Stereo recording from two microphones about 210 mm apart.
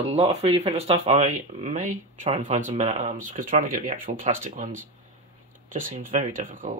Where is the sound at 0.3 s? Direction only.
30° right (ahead or behind).